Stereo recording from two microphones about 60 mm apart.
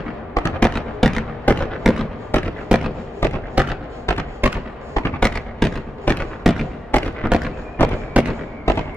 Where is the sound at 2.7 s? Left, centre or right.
Centre.